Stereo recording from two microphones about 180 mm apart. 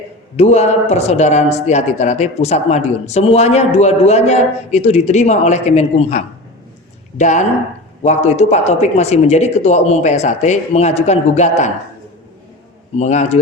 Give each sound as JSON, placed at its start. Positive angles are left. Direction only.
{"t": 0.3, "sound": "speech", "side_deg": 35}
{"t": 13.0, "sound": "speech", "side_deg": 40}